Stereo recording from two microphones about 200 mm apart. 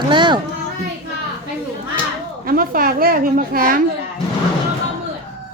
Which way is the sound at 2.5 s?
45° right (ahead or behind).